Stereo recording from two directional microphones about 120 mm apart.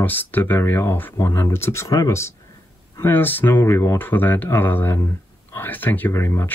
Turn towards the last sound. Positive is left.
turn(degrees=25)  # may be behind; listen again after turning